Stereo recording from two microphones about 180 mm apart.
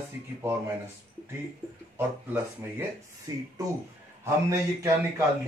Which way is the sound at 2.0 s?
10° right (ahead or behind).